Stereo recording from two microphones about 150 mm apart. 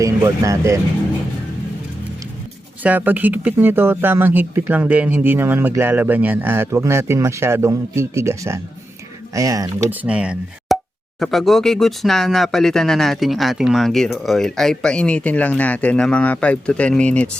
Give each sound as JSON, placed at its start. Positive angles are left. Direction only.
{"t": 0.0, "sound": "speech", "side_deg": -20}
{"t": 2.8, "sound": "speech", "side_deg": -10}
{"t": 9.9, "sound": "speech", "side_deg": -10}